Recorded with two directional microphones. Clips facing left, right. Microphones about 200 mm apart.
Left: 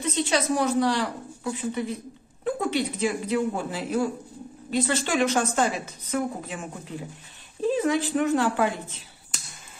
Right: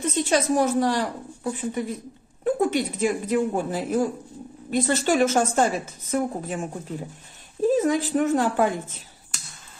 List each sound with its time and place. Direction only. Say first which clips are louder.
0.0 s speech: right 2 dB; 50° right (ahead or behind)
7.7 s speech: right 2 dB; 45° right (ahead or behind)